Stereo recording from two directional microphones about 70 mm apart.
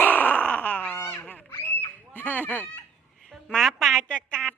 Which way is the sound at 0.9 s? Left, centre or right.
Left.